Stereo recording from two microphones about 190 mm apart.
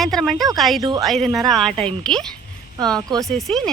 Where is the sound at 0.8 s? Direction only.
20° right (ahead or behind).